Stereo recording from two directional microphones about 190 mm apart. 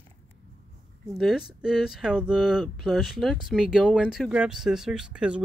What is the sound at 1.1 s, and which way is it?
Speech, centre (ahead or behind).